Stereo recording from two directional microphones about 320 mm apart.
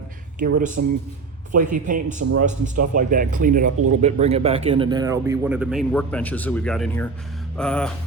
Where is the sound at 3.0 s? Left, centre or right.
Right.